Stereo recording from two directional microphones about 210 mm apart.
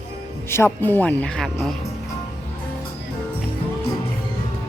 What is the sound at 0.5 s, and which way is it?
Speech, 10° left (ahead or behind).